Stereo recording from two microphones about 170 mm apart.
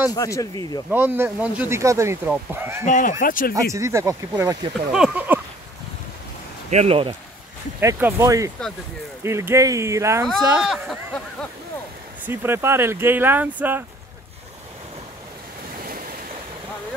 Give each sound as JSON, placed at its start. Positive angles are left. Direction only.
{"t": 0.1, "sound": "speech", "side_deg": 20}
{"t": 0.8, "sound": "speech", "side_deg": -10}
{"t": 2.8, "sound": "speech", "side_deg": 50}
{"t": 3.7, "sound": "speech", "side_deg": -15}
{"t": 4.9, "sound": "speech", "side_deg": -5}
{"t": 6.7, "sound": "speech", "side_deg": -40}
{"t": 7.8, "sound": "speech", "side_deg": -20}
{"t": 12.3, "sound": "speech", "side_deg": -15}